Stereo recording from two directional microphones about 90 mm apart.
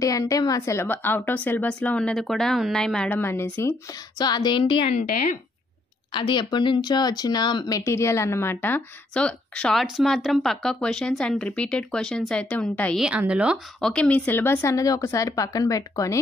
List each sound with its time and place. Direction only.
0.0 s speech: 40° left (ahead or behind)
0.6 s a woman's voice: 30° left (ahead or behind); by 3.1 s 10° left (ahead or behind)
3.1 s speech: 25° left (ahead or behind)
4.2 s a sound: 55° left (ahead or behind)
6.1 s speech: 60° left (ahead or behind); by 8.8 s 25° left (ahead or behind)
9.1 s speech: 10° left (ahead or behind)
13.3 s speech: 15° right (ahead or behind)
13.7 s speech: 10° left (ahead or behind); by 16.2 s 40° left (ahead or behind)